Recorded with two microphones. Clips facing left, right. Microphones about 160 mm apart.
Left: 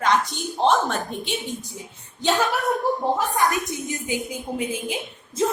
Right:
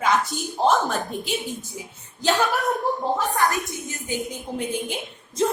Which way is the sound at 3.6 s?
15° left (ahead or behind).